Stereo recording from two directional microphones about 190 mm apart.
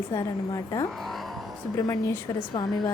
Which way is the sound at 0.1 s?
15° left (ahead or behind).